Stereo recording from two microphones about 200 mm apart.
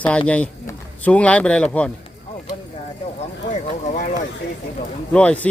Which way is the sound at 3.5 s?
40° left (ahead or behind).